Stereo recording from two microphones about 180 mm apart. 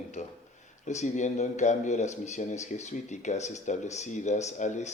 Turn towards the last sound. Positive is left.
turn(degrees=40)  # may be behind; listen again after turning